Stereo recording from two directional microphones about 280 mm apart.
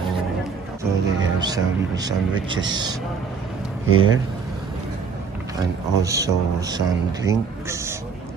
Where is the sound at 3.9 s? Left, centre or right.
Right.